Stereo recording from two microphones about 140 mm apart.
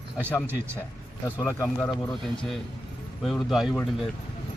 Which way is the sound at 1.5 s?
15° left (ahead or behind).